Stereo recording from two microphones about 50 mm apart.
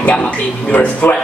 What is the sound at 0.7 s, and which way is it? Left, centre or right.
Music, left.